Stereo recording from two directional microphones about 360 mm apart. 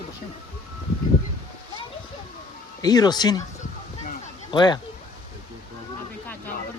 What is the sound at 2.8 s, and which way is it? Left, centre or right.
Speech, centre.